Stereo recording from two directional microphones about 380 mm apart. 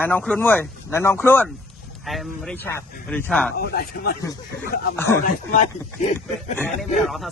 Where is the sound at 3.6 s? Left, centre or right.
Left.